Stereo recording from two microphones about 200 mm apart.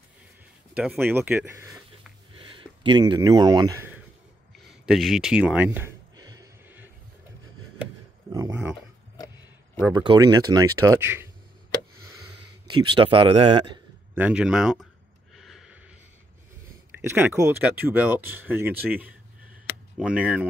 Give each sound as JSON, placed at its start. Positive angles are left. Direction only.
{"t": 0.7, "sound": "speech", "side_deg": -10}
{"t": 2.3, "sound": "speech", "side_deg": -25}
{"t": 4.6, "sound": "a sound", "side_deg": 0}
{"t": 9.9, "sound": "speech", "side_deg": -20}
{"t": 12.6, "sound": "speech", "side_deg": -25}
{"t": 14.1, "sound": "speech", "side_deg": -5}
{"t": 15.3, "sound": "a sound", "side_deg": 0}
{"t": 17.0, "sound": "speech", "side_deg": -10}